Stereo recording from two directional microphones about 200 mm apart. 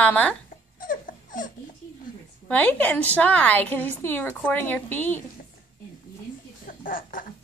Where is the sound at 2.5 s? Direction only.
5° left (ahead or behind).